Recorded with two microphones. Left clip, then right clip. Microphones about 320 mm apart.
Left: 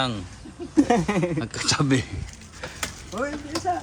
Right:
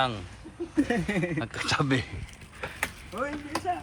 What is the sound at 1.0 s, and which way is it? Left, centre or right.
Speech, centre.